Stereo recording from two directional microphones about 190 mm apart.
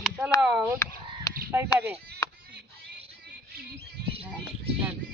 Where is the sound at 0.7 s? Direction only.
20° left (ahead or behind).